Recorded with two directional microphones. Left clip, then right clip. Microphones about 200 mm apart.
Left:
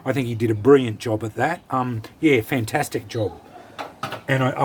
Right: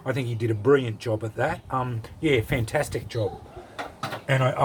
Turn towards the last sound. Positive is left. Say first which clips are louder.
# left 2 dB
turn(degrees=25)  # may be behind; listen again after turning